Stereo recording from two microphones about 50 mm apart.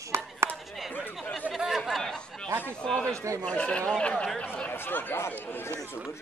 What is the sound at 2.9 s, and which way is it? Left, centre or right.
Speech, centre.